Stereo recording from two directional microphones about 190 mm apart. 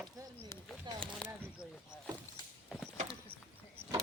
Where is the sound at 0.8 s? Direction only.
25° right (ahead or behind).